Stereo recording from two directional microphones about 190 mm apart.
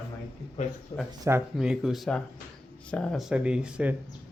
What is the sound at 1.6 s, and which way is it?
Speech, centre (ahead or behind).